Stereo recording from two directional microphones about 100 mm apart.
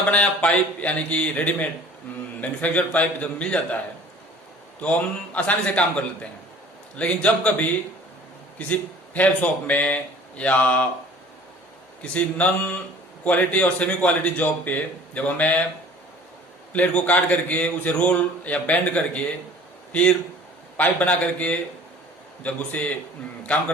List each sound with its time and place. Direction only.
0.0 s a man's voice: 15° left (ahead or behind)
4.8 s a man's voice: 15° left (ahead or behind)
6.9 s a man's voice: 10° left (ahead or behind)
12.1 s a man's voice: 15° left (ahead or behind)
16.7 s a man's voice: 15° left (ahead or behind)